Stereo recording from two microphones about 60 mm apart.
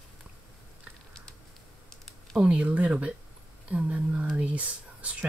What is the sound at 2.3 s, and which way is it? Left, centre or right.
Speech, centre.